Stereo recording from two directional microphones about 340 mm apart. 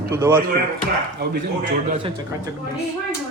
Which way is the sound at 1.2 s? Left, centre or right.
Right.